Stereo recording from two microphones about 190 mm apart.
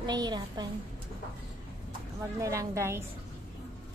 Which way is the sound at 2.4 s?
15° right (ahead or behind).